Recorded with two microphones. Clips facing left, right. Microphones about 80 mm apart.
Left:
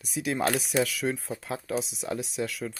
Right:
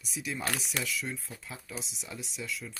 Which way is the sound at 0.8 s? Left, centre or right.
Left.